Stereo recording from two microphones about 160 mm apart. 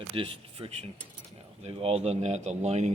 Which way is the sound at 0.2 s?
35° right (ahead or behind).